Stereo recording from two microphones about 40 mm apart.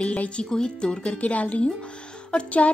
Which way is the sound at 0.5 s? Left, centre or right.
Left.